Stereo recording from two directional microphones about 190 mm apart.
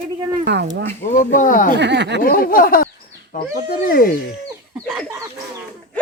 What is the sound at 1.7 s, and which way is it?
Speech, 65° right (ahead or behind).